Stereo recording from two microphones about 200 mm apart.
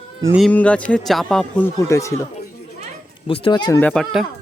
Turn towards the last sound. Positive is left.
turn(degrees=0)  # may be behind; listen again after turning